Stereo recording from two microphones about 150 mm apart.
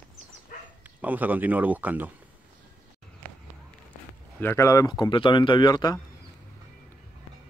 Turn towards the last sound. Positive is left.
turn(degrees=30)  # may be behind; listen again after turning